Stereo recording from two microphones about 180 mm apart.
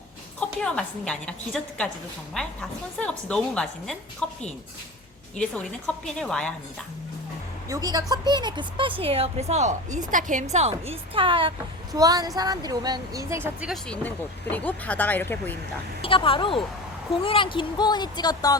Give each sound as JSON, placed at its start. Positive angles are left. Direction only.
{"t": 0.3, "sound": "a woman's voice", "side_deg": 5}
{"t": 5.4, "sound": "a woman's voice", "side_deg": 5}
{"t": 7.7, "sound": "a woman's voice", "side_deg": -20}
{"t": 14.5, "sound": "speech", "side_deg": 10}
{"t": 16.0, "sound": "speech", "side_deg": 30}